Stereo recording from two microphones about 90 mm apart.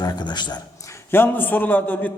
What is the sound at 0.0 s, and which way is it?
Speech, 50° left (ahead or behind).